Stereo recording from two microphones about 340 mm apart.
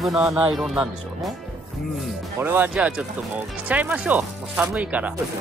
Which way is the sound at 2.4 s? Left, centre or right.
Centre.